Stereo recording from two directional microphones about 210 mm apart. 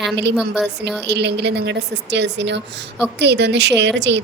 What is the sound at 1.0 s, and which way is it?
A woman's voice, 55° right (ahead or behind).